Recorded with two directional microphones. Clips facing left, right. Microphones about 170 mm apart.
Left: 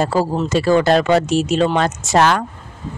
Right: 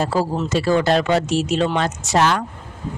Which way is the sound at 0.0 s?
50° left (ahead or behind).